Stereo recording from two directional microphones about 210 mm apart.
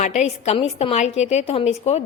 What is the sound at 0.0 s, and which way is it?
A woman's voice, 35° left (ahead or behind).